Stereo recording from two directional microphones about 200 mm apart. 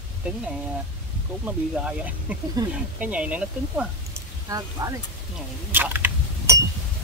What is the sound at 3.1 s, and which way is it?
Speech, 5° right (ahead or behind).